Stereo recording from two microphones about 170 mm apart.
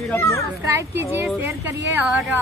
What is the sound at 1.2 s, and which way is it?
Speech, 10° right (ahead or behind).